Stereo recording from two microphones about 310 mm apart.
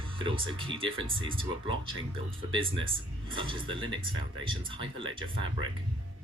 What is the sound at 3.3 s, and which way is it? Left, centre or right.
Speech, centre.